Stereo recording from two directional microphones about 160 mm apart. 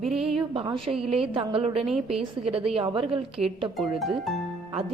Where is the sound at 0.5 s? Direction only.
35° right (ahead or behind).